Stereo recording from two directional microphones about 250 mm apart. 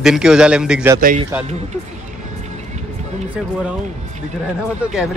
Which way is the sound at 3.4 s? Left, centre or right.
Centre.